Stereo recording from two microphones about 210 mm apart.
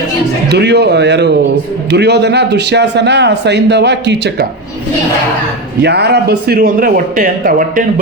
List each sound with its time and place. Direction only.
0.5 s a man's voice: 55° right (ahead or behind)
5.8 s speech: 50° right (ahead or behind)